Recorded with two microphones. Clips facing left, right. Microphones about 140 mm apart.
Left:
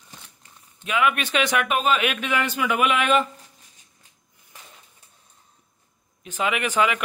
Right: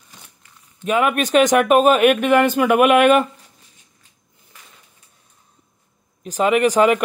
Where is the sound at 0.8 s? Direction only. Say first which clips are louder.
Right 5 dB; 45° right (ahead or behind).